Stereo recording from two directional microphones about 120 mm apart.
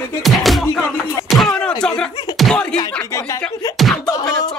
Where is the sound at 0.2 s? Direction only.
Centre (ahead or behind).